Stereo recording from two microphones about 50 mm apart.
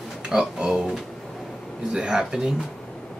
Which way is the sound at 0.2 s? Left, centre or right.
Centre.